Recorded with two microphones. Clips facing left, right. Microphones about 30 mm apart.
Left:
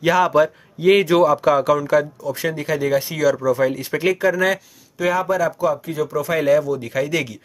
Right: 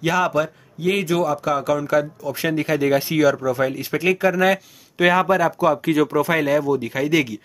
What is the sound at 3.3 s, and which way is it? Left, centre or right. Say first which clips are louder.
Speech: left 3 dB; centre.